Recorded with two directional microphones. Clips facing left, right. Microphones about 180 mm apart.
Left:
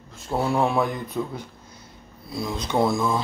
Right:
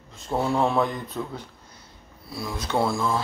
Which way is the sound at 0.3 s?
5° left (ahead or behind).